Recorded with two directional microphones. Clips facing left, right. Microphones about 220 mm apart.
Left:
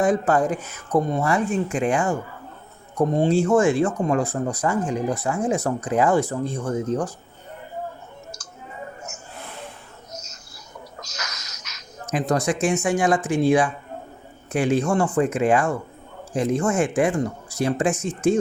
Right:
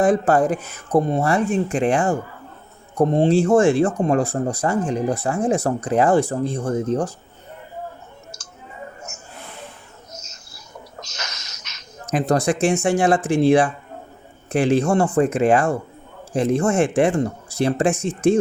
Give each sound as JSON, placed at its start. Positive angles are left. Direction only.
{"t": 0.0, "sound": "speech", "side_deg": -35}
{"t": 11.0, "sound": "a sound", "side_deg": -25}
{"t": 12.1, "sound": "speech", "side_deg": -30}